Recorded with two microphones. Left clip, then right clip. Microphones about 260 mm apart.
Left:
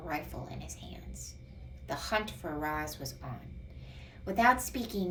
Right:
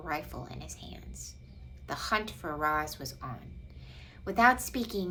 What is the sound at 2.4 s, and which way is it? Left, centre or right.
Speech, centre.